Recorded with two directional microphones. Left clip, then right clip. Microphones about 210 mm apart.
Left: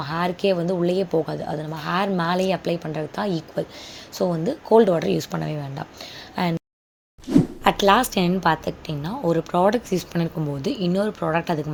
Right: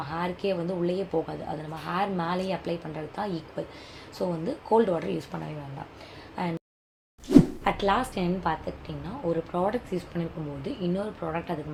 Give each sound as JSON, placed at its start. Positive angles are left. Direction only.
{"t": 0.0, "sound": "a woman's voice", "side_deg": 40}
{"t": 7.3, "sound": "plop", "side_deg": 0}
{"t": 7.6, "sound": "a woman's voice", "side_deg": 55}